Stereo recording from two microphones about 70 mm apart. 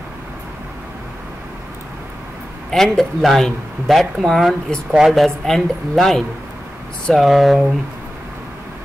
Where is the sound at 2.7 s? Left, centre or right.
Centre.